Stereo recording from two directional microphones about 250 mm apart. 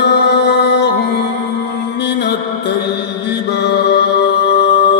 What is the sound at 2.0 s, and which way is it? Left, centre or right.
Mantra, left.